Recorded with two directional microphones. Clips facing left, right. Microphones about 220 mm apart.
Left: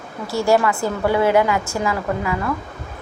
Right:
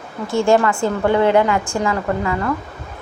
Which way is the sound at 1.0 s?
5° left (ahead or behind).